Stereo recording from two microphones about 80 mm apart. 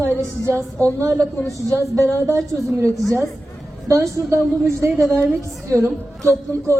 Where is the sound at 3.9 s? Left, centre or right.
Right.